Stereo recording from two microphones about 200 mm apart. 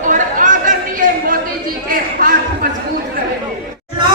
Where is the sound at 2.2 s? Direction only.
45° right (ahead or behind).